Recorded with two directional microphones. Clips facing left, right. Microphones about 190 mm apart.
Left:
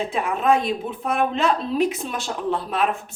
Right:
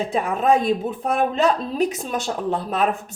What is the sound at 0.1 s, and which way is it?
Speech, 40° right (ahead or behind).